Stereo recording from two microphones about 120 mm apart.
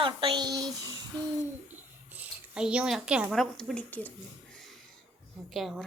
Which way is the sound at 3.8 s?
15° left (ahead or behind).